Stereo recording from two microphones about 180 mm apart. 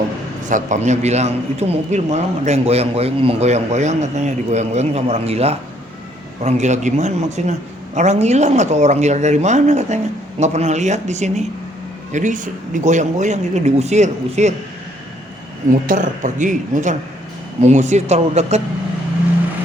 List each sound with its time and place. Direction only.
0.4 s a man's voice: 45° right (ahead or behind)
15.9 s a man's voice: 45° right (ahead or behind)